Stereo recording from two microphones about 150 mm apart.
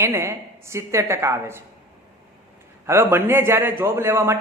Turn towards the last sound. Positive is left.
turn(degrees=-15)  # may be behind; listen again after turning